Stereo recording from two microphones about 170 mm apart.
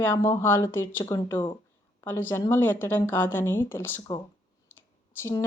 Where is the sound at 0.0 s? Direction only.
15° left (ahead or behind).